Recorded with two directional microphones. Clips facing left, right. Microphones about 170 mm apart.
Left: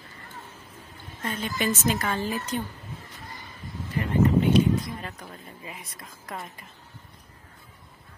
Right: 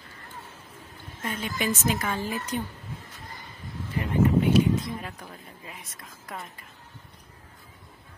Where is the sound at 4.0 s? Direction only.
15° right (ahead or behind).